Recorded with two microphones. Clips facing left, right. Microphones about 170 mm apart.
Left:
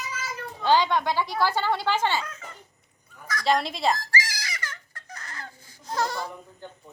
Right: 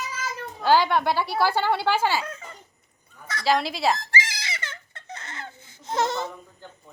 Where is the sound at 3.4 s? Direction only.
Centre (ahead or behind).